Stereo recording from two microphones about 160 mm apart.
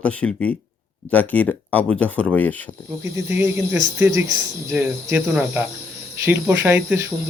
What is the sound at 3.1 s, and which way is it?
Speech, 15° right (ahead or behind).